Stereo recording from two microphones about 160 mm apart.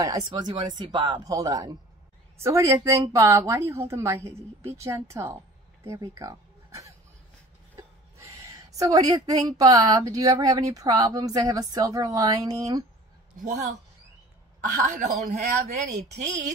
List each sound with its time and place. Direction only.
0.0 s speech: 25° right (ahead or behind)
7.7 s a sound: 20° right (ahead or behind)
9.6 s speech: 25° right (ahead or behind)
13.4 s a woman's voice: 50° right (ahead or behind)